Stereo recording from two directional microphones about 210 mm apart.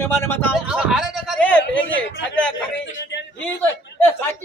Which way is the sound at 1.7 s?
65° left (ahead or behind).